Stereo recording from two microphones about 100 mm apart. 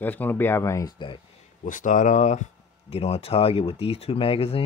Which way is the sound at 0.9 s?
55° left (ahead or behind).